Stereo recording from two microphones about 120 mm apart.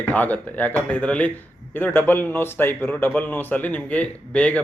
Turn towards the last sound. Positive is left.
turn(degrees=10)  # may be behind; listen again after turning